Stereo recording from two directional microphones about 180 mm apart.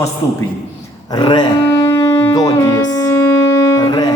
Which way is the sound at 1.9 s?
15° left (ahead or behind).